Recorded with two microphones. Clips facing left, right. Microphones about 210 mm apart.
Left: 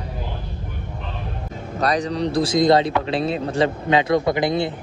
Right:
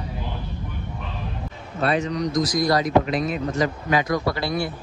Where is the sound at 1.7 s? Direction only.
40° left (ahead or behind); by 4.7 s 20° left (ahead or behind).